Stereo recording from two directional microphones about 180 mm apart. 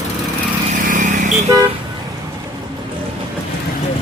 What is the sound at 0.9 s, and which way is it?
Vehicle, 45° right (ahead or behind).